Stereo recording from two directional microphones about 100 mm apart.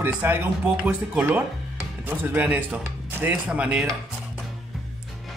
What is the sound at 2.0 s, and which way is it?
Speech, 20° right (ahead or behind).